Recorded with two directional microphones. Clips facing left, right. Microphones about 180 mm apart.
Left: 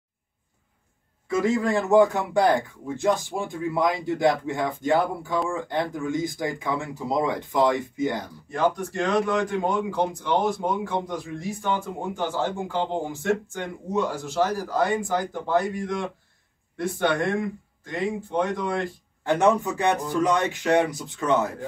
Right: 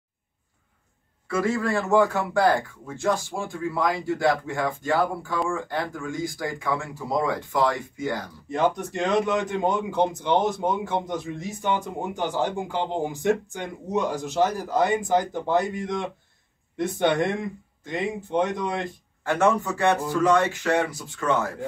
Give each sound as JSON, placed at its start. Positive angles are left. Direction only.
{"t": 1.2, "sound": "speech", "side_deg": 20}
{"t": 8.5, "sound": "a man's voice", "side_deg": -20}
{"t": 19.2, "sound": "speech", "side_deg": 20}